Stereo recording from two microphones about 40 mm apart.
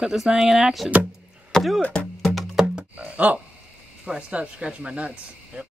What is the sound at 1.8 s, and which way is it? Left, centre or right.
Speech, left.